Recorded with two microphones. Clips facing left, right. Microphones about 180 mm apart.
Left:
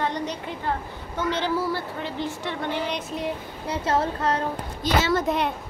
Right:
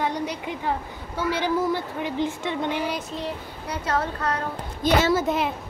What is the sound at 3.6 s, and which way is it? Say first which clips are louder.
Speech: left 2 dB; 25° left (ahead or behind).